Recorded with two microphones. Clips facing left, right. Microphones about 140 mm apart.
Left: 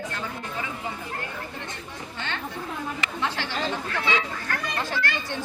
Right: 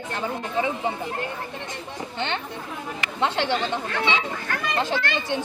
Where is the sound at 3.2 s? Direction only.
20° right (ahead or behind).